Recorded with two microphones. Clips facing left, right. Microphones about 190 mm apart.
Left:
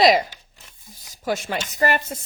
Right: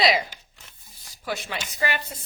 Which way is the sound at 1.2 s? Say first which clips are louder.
Left 6 dB; 45° left (ahead or behind).